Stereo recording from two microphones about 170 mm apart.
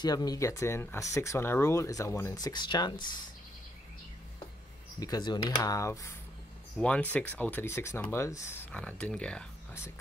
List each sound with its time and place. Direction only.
0.0 s speech: 20° left (ahead or behind)
5.0 s speech: 25° left (ahead or behind)
8.7 s speech: 5° left (ahead or behind)